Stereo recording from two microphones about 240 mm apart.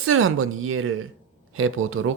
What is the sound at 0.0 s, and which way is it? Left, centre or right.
Speech, right.